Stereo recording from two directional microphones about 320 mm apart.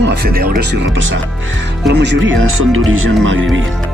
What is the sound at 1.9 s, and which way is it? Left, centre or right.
Speech, right.